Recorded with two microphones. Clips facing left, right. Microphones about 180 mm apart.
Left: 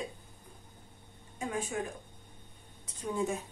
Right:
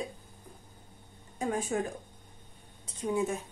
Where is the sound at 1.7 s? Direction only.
45° right (ahead or behind).